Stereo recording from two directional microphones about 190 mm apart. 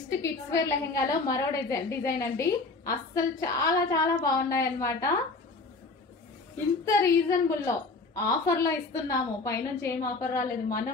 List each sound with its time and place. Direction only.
0.2 s a woman's voice: 15° left (ahead or behind)
6.8 s a woman's voice: 15° left (ahead or behind)